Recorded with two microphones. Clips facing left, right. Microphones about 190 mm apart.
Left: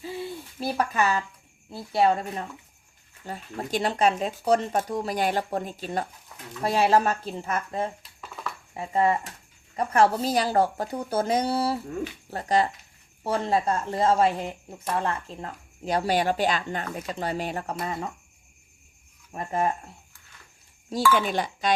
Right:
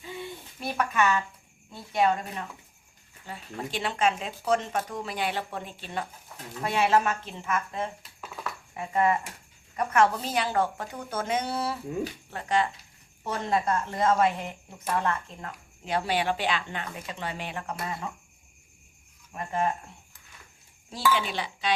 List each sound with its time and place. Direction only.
0.6 s speech: 35° left (ahead or behind)
8.0 s dishes: centre (ahead or behind)
8.7 s speech: 30° left (ahead or behind)
19.3 s speech: 35° left (ahead or behind)
20.9 s speech: 45° left (ahead or behind)